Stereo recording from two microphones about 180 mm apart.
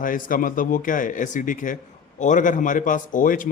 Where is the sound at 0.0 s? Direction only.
50° left (ahead or behind).